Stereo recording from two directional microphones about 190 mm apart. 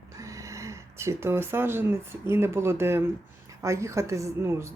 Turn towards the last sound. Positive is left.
turn(degrees=-15)  # may be behind; listen again after turning